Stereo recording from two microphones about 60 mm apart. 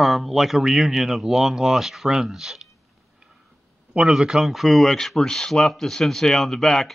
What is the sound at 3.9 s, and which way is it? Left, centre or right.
Speech, centre.